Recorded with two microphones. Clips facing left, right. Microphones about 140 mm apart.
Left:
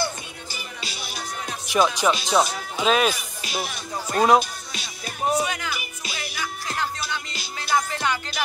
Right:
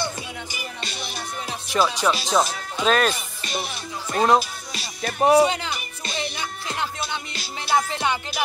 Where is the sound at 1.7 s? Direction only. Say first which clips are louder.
Left 1 dB; centre (ahead or behind).